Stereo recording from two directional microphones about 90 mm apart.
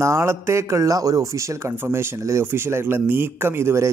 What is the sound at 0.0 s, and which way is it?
Speech, 30° right (ahead or behind).